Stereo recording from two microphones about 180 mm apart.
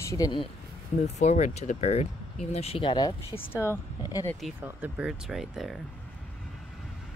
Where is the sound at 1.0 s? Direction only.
40° left (ahead or behind).